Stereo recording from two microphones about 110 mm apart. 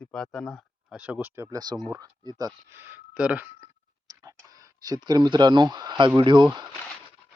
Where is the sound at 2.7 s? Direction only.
20° right (ahead or behind).